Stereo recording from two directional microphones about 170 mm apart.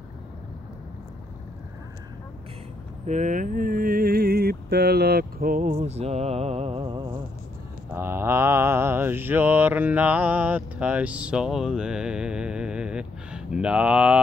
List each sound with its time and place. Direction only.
3.1 s mantra: 50° right (ahead or behind); by 7.2 s 25° right (ahead or behind)
7.9 s mantra: 15° right (ahead or behind)